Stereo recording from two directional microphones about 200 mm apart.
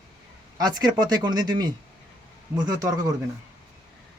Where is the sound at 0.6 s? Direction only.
20° right (ahead or behind).